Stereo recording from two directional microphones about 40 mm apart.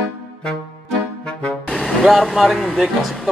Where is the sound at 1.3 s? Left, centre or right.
Left.